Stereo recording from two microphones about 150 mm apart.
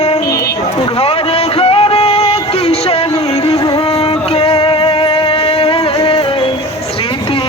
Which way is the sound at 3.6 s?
30° left (ahead or behind).